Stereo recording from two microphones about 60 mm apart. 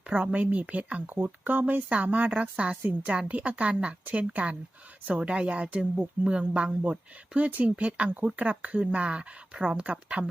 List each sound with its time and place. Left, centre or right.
0.1 s speech: centre